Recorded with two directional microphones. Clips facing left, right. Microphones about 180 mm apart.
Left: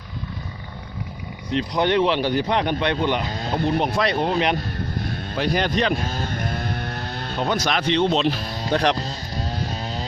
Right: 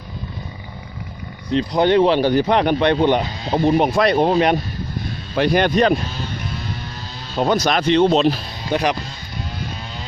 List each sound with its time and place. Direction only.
1.5 s speech: 30° right (ahead or behind)
2.5 s a man's voice: 60° right (ahead or behind)
6.1 s a sound: 50° left (ahead or behind)
7.5 s speech: 40° right (ahead or behind)
8.7 s speech: 5° right (ahead or behind)
9.0 s music: 35° left (ahead or behind)